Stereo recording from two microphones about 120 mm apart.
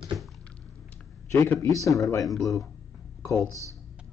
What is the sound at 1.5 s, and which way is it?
Speech, 25° left (ahead or behind).